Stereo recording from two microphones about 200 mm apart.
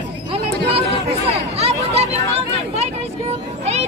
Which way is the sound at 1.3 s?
30° right (ahead or behind).